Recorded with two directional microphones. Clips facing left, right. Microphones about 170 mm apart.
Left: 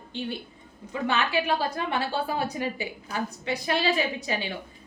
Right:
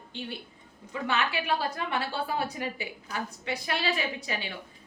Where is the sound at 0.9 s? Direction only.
25° left (ahead or behind).